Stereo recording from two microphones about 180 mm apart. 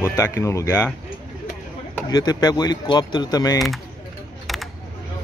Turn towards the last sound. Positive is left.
turn(degrees=0)  # may be behind; listen again after turning